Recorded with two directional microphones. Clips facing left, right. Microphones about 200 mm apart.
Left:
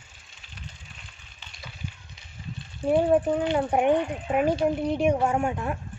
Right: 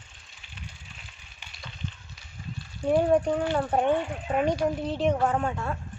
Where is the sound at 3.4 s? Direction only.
20° left (ahead or behind).